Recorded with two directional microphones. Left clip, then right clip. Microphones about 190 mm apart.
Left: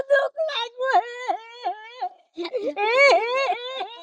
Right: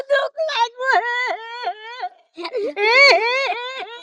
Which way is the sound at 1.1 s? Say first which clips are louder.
Right 6 dB; 30° right (ahead or behind).